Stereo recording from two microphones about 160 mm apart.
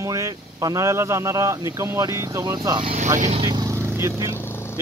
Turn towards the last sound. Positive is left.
turn(degrees=15)  # may be behind; listen again after turning